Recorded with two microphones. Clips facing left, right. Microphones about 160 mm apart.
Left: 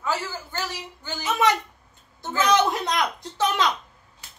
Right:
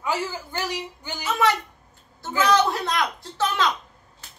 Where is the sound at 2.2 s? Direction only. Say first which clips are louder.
Right 1 dB; 20° left (ahead or behind).